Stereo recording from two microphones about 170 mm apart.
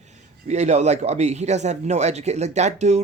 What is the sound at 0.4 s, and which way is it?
Speech, 40° right (ahead or behind).